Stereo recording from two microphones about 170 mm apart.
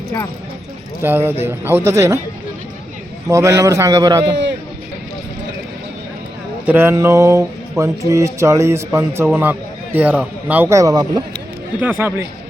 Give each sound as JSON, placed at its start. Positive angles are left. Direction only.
{"t": 1.0, "sound": "speech", "side_deg": -10}
{"t": 3.2, "sound": "a man's voice", "side_deg": -15}
{"t": 6.7, "sound": "speech", "side_deg": -15}
{"t": 11.8, "sound": "speech", "side_deg": -10}